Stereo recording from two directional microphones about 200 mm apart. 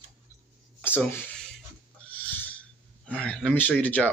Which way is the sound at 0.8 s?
10° left (ahead or behind).